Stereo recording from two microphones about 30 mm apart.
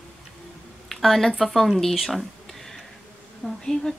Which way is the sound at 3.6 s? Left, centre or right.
Left.